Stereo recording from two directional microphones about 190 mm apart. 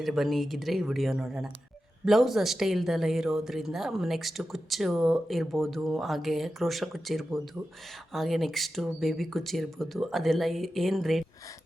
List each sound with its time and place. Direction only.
0.0 s a woman's voice: centre (ahead or behind)